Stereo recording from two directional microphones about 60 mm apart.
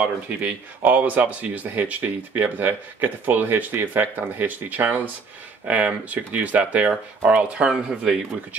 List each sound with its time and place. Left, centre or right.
0.0 s speech: right